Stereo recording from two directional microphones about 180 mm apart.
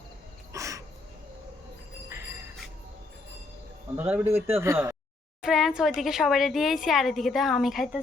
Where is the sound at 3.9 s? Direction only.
10° right (ahead or behind).